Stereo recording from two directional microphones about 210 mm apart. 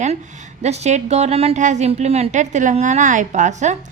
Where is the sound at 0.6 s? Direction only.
30° right (ahead or behind).